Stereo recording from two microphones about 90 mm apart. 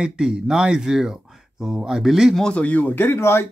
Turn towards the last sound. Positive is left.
turn(degrees=30)  # may be behind; listen again after turning